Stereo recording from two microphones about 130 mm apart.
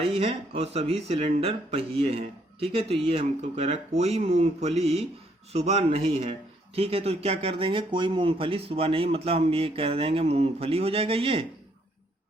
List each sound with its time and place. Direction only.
0.0 s speech: 50° right (ahead or behind)